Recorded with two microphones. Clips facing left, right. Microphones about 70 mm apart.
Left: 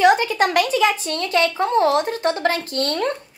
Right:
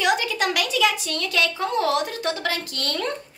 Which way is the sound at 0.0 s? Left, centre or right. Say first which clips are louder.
Left 7 dB; left.